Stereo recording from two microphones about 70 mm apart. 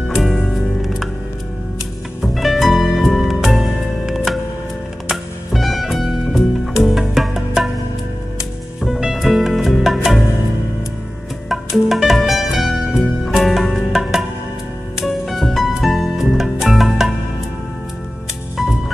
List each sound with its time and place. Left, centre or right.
0.1 s music: centre
2.2 s music: centre
8.8 s music: centre
11.4 s music: centre
15.2 s music: centre